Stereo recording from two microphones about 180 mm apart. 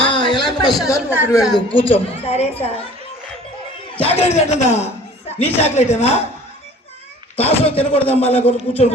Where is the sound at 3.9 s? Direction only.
35° left (ahead or behind).